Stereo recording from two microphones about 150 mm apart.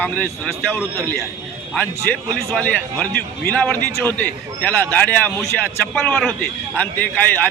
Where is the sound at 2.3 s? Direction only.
5° left (ahead or behind).